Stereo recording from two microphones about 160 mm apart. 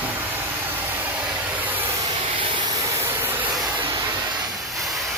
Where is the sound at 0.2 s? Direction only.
10° right (ahead or behind).